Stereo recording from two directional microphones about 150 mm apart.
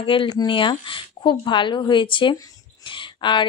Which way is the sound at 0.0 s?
35° left (ahead or behind).